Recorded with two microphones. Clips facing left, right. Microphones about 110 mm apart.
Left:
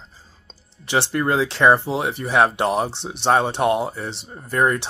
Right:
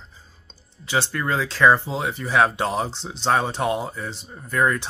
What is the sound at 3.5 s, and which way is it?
Speech, 65° left (ahead or behind).